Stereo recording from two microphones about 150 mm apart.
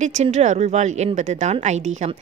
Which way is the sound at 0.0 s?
50° right (ahead or behind).